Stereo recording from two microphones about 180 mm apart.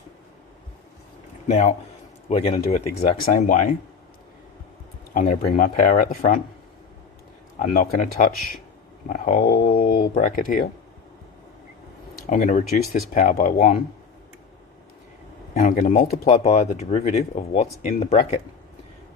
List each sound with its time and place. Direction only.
1.5 s speech: 40° left (ahead or behind)
5.1 s speech: 50° left (ahead or behind)
7.6 s speech: 45° left (ahead or behind)
12.3 s speech: 40° left (ahead or behind)
15.5 s speech: 40° left (ahead or behind)